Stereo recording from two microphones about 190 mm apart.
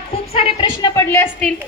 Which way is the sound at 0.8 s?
15° left (ahead or behind).